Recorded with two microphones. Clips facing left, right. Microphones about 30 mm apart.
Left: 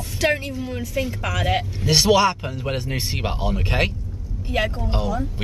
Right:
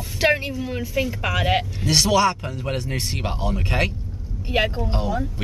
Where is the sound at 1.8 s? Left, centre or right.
Centre.